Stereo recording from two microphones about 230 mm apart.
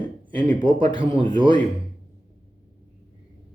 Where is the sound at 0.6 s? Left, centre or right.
Right.